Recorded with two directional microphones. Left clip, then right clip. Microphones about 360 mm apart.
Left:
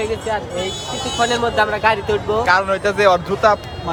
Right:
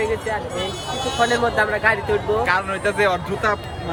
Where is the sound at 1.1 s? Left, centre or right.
Centre.